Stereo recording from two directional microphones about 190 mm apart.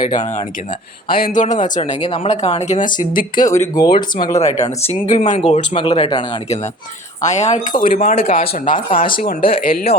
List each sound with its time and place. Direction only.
0.0 s speech: 25° left (ahead or behind)
1.2 s speech: 40° left (ahead or behind)
3.3 s speech: 15° left (ahead or behind)
4.3 s speech: 35° left (ahead or behind)
7.2 s speech: 40° left (ahead or behind)
8.1 s speech: 30° left (ahead or behind)
8.4 s speech: 45° left (ahead or behind)